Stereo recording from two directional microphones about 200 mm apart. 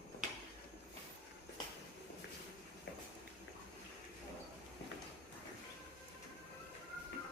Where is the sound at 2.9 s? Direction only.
55° left (ahead or behind).